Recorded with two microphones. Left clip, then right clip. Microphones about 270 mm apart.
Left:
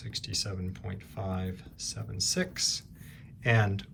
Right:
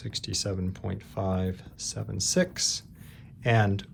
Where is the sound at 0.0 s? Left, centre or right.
Centre.